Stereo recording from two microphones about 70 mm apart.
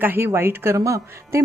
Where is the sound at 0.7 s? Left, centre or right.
Right.